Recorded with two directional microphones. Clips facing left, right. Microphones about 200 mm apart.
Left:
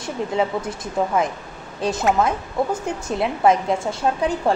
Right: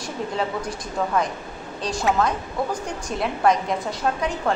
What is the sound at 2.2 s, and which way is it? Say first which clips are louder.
A woman's voice: left 3 dB; 25° left (ahead or behind).